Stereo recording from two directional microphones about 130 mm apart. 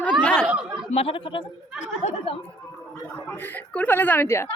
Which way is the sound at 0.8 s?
50° left (ahead or behind).